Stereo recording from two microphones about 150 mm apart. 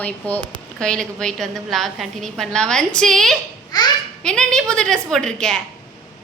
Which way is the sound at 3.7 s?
25° left (ahead or behind).